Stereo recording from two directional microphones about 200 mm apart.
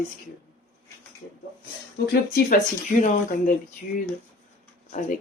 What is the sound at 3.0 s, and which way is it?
Speech, 40° left (ahead or behind).